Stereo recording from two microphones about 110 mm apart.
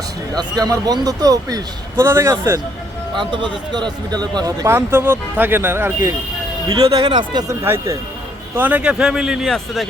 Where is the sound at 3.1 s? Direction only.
45° right (ahead or behind).